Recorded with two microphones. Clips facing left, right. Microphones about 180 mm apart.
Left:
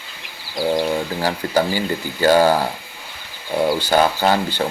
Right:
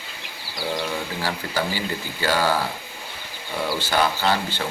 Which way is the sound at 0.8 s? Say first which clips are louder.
Left 7 dB; 40° left (ahead or behind).